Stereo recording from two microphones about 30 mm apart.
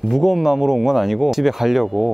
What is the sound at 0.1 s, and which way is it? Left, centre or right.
Speech, centre.